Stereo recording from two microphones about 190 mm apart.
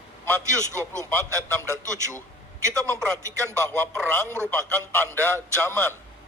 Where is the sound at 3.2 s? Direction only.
15° right (ahead or behind).